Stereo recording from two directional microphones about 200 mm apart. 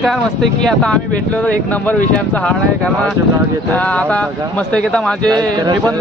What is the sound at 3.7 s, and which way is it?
Speech, 5° left (ahead or behind).